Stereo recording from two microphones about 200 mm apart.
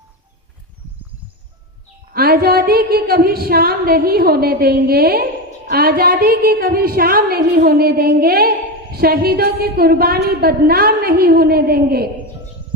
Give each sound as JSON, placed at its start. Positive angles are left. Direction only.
{"t": 2.1, "sound": "a woman's voice", "side_deg": -50}